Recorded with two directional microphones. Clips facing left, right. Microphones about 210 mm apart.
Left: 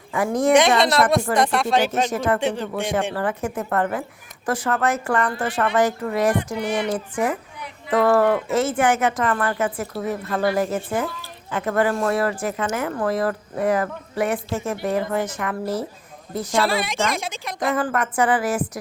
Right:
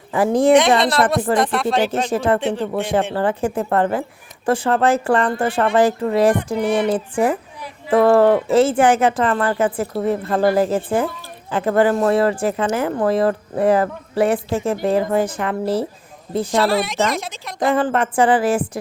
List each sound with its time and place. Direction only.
0.1 s speech: 30° right (ahead or behind)
1.4 s a woman's voice: centre (ahead or behind)
2.0 s speech: 30° right (ahead or behind)
2.4 s a woman's voice: centre (ahead or behind)
3.2 s speech: 30° right (ahead or behind)
6.6 s music: 55° right (ahead or behind)
6.8 s speech: 30° right (ahead or behind)
16.6 s a woman's voice: centre (ahead or behind)
17.6 s speech: 30° right (ahead or behind)